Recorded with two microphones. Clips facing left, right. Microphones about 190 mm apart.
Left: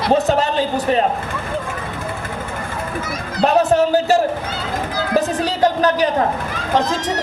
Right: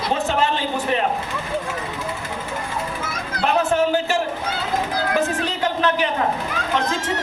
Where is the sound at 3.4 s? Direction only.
40° left (ahead or behind).